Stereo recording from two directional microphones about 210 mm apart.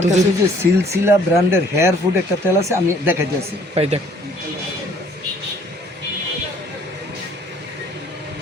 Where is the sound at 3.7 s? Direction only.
30° right (ahead or behind).